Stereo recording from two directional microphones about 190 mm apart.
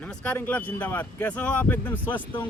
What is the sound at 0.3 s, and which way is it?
A man's voice, 10° left (ahead or behind).